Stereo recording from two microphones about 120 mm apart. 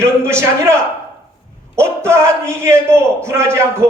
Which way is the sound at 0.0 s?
20° right (ahead or behind).